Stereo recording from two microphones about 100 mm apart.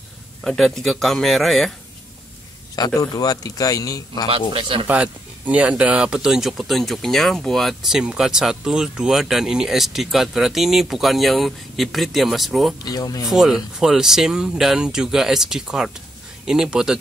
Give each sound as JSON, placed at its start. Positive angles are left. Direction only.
{"t": 0.4, "sound": "speech", "side_deg": 5}
{"t": 2.7, "sound": "a man's voice", "side_deg": 40}
{"t": 4.3, "sound": "a man's voice", "side_deg": -60}
{"t": 4.8, "sound": "speech", "side_deg": -15}
{"t": 12.8, "sound": "a man's voice", "side_deg": 40}
{"t": 13.2, "sound": "speech", "side_deg": -5}